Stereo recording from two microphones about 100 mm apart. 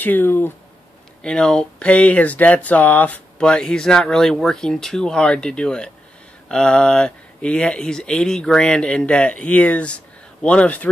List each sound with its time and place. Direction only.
0.0 s speech: 20° left (ahead or behind)
1.2 s speech: 5° left (ahead or behind)